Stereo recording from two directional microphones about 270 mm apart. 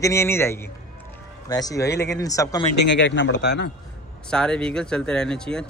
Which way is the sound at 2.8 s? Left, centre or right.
Left.